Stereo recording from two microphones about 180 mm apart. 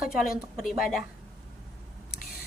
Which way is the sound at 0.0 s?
Centre (ahead or behind).